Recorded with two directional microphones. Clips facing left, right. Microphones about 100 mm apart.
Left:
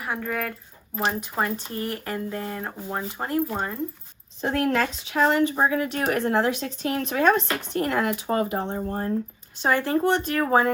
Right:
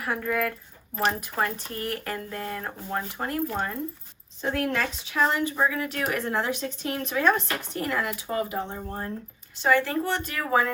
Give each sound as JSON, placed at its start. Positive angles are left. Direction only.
{"t": 0.0, "sound": "speech", "side_deg": 5}
{"t": 1.7, "sound": "speech", "side_deg": 20}
{"t": 4.5, "sound": "speech", "side_deg": 65}
{"t": 5.5, "sound": "speech", "side_deg": 40}
{"t": 6.1, "sound": "speech", "side_deg": 55}
{"t": 7.8, "sound": "speech", "side_deg": 50}
{"t": 10.3, "sound": "speech", "side_deg": 35}